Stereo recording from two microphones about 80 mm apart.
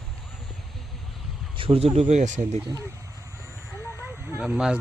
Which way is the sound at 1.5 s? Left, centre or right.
Right.